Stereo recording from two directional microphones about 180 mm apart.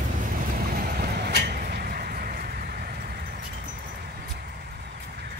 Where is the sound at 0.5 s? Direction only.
55° right (ahead or behind).